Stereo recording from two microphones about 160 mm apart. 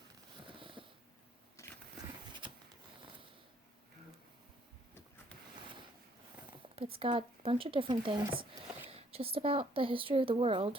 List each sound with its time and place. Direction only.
0.4 s a sound: 30° right (ahead or behind)
1.6 s vehicle: 20° left (ahead or behind)
6.7 s speech: 35° right (ahead or behind)